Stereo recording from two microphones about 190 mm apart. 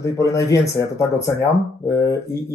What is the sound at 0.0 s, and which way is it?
Speech, 15° left (ahead or behind).